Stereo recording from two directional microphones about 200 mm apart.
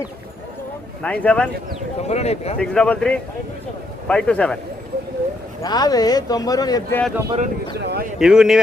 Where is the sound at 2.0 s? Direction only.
30° left (ahead or behind).